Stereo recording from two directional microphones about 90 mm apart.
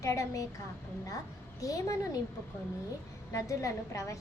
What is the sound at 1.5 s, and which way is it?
Speech, 40° left (ahead or behind).